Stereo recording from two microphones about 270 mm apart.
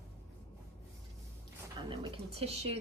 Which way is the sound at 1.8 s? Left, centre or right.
Right.